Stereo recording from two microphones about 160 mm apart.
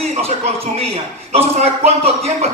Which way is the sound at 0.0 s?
40° right (ahead or behind).